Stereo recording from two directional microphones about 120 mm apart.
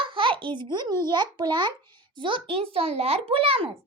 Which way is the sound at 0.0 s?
45° right (ahead or behind).